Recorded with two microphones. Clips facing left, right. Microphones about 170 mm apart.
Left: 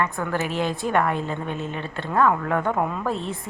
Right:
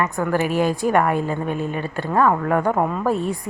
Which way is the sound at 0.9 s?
10° right (ahead or behind).